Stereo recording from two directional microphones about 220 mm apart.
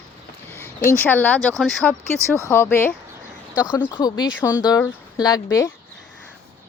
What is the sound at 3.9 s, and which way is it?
Speech, 20° left (ahead or behind).